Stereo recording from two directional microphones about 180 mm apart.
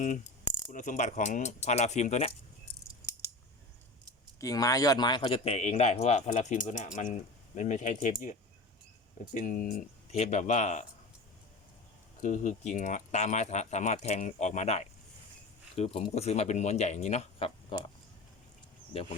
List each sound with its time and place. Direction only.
0.7 s speech: 45° left (ahead or behind)
4.4 s speech: 20° left (ahead or behind); by 10.8 s 40° left (ahead or behind)
12.2 s speech: 45° left (ahead or behind)